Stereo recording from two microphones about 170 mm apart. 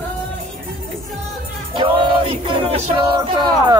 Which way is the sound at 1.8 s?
30° right (ahead or behind).